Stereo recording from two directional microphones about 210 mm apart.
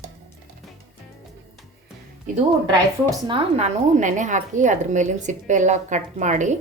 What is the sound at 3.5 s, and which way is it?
A woman's voice, 35° right (ahead or behind).